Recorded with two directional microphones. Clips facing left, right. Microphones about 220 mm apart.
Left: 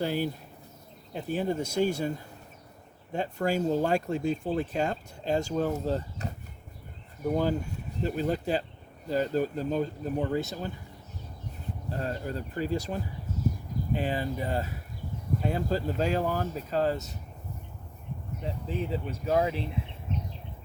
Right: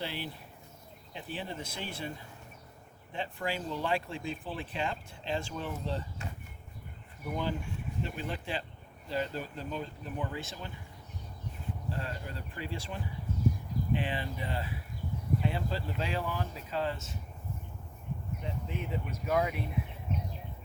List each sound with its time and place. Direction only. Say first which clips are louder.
0.0 s speech: left 10 dB; 45° left (ahead or behind)
11.9 s speech: left 8 dB; 40° left (ahead or behind)
18.4 s speech: left 6 dB; 35° left (ahead or behind)